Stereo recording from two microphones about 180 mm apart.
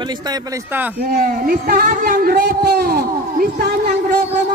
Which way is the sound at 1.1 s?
50° right (ahead or behind).